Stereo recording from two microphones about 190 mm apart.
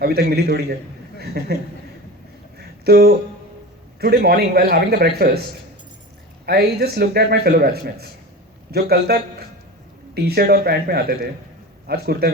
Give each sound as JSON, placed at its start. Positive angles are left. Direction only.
{"t": 0.0, "sound": "a man's voice", "side_deg": -55}
{"t": 2.8, "sound": "a man's voice", "side_deg": -55}
{"t": 6.4, "sound": "a man's voice", "side_deg": -55}
{"t": 10.2, "sound": "a man's voice", "side_deg": -55}